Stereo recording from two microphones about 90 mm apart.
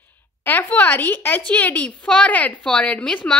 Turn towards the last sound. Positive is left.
turn(degrees=15)  # may be behind; listen again after turning